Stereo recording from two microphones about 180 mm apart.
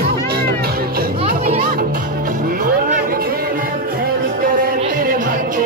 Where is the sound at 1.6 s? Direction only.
55° right (ahead or behind).